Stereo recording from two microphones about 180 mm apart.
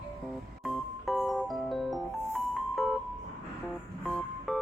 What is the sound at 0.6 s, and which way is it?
Music, centre (ahead or behind).